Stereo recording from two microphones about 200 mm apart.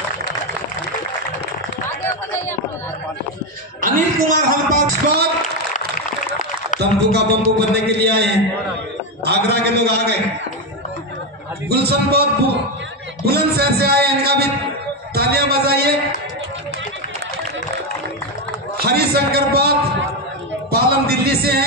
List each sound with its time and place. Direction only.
3.8 s speech: 45° right (ahead or behind)
6.8 s a man's voice: 55° right (ahead or behind)
11.7 s a man's voice: 55° right (ahead or behind)
18.8 s a man's voice: 50° right (ahead or behind)
20.7 s a sound: 50° right (ahead or behind)